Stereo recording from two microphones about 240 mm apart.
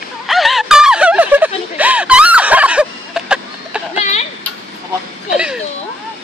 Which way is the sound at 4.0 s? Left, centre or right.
Left.